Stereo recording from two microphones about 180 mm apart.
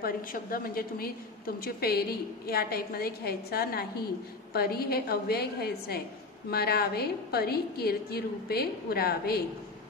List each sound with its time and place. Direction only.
0.0 s a woman's voice: 55° left (ahead or behind)